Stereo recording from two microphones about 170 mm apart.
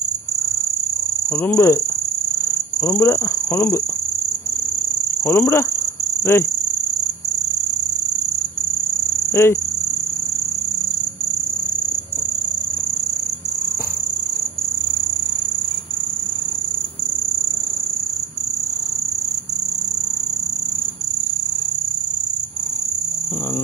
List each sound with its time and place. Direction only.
1.4 s speech: 15° left (ahead or behind)
2.8 s speech: 15° left (ahead or behind)
5.2 s speech: 15° left (ahead or behind)
9.3 s speech: 15° left (ahead or behind)